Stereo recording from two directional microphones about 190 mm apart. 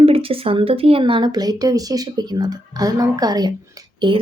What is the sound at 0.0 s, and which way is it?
A woman's voice, 30° right (ahead or behind).